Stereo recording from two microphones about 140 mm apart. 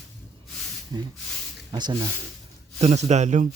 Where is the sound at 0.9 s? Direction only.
30° right (ahead or behind).